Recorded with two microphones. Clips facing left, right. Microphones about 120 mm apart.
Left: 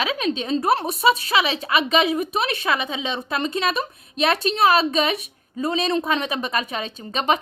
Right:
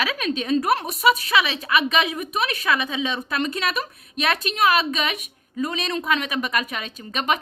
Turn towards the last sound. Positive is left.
turn(degrees=30)  # may be behind; listen again after turning